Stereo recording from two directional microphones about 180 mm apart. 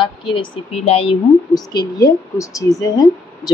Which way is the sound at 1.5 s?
20° left (ahead or behind).